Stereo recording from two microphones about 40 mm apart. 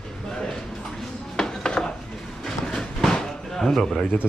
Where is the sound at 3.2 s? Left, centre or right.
Centre.